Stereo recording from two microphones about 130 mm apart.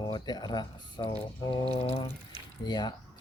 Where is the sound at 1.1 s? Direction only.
45° left (ahead or behind).